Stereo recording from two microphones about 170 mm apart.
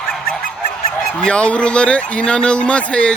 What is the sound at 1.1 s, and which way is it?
Speech, 5° left (ahead or behind).